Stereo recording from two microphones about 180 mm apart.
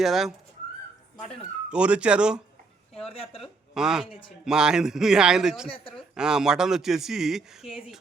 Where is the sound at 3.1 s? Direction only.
30° left (ahead or behind).